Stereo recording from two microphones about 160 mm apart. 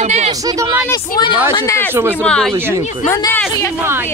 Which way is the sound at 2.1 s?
5° left (ahead or behind).